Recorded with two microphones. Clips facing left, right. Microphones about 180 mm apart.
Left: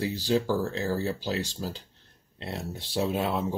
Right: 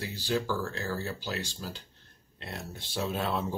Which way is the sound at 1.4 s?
30° left (ahead or behind).